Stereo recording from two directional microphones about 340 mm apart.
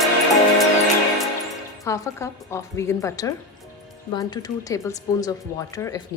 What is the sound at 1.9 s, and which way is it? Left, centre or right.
Speech, centre.